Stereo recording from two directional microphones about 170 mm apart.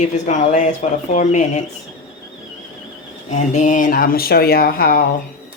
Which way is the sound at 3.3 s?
45° left (ahead or behind).